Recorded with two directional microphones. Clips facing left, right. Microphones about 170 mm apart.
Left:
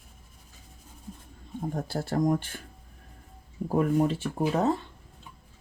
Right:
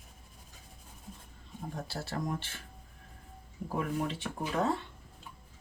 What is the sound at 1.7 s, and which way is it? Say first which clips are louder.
Speech: left 8 dB; 50° left (ahead or behind).